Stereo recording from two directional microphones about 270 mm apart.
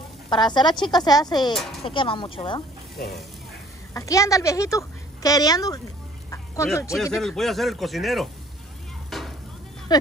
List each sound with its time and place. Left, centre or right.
0.3 s a woman's voice: centre
1.5 s speech: centre
1.9 s speech: centre
3.9 s speech: centre
9.1 s a sound: centre